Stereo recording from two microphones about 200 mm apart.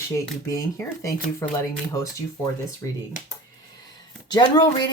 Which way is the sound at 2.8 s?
15° left (ahead or behind).